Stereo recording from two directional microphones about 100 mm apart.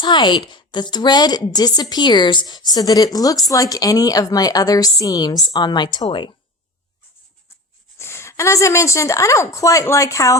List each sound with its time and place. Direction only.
0.0 s a woman's voice: 50° left (ahead or behind)
7.9 s a woman's voice: 25° left (ahead or behind)